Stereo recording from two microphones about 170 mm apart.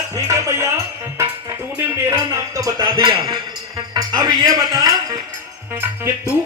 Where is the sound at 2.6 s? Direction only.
25° right (ahead or behind).